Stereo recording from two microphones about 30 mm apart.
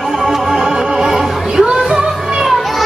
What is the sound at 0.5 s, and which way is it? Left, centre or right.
Music, right.